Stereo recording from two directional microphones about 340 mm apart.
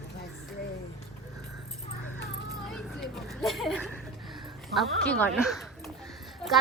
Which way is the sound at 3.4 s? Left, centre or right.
Centre.